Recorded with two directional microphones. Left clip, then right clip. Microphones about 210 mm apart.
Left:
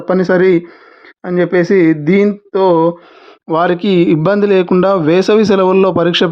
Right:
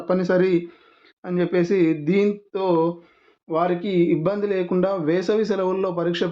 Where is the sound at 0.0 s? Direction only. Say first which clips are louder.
Left 9 dB; 35° left (ahead or behind).